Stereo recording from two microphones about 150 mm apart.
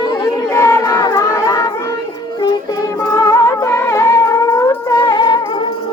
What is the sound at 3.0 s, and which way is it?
Music, 20° left (ahead or behind).